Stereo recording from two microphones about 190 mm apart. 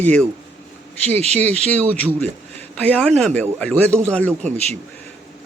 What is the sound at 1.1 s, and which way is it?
Speech, 35° right (ahead or behind).